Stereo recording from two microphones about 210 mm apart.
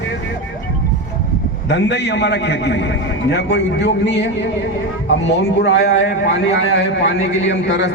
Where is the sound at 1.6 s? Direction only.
55° left (ahead or behind).